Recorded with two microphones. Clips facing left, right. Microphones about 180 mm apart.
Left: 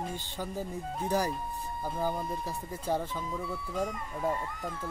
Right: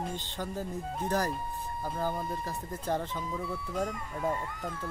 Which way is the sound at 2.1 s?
Centre (ahead or behind).